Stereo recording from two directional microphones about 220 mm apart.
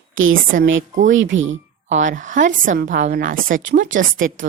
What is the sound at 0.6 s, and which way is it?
Speech, 60° right (ahead or behind).